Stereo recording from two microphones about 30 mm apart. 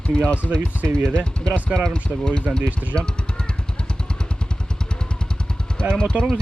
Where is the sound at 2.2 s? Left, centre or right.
Left.